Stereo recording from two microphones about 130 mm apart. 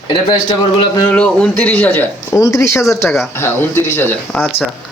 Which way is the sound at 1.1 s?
10° left (ahead or behind).